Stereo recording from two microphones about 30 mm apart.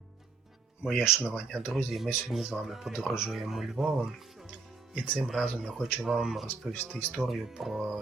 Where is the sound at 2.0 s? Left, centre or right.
Centre.